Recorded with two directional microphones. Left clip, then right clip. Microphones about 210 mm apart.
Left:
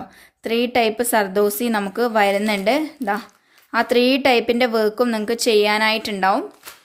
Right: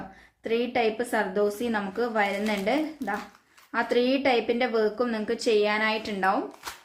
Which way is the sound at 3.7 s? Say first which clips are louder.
Left 7 dB; 50° left (ahead or behind).